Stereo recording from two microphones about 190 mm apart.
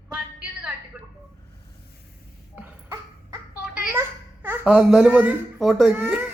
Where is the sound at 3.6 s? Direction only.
5° right (ahead or behind).